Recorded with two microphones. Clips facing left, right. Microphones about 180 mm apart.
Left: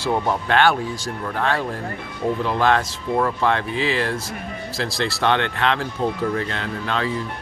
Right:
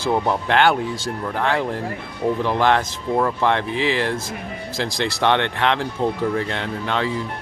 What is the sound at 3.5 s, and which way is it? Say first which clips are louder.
Speech: right 1 dB; 20° right (ahead or behind).